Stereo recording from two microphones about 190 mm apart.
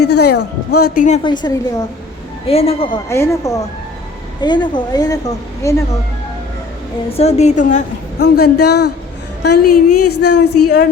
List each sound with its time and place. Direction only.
0.0 s a woman's voice: 60° left (ahead or behind)
1.2 s a woman's voice: 25° left (ahead or behind)
3.1 s a woman's voice: 15° left (ahead or behind)
7.1 s a woman's voice: 35° left (ahead or behind)
8.2 s a woman's voice: 55° left (ahead or behind)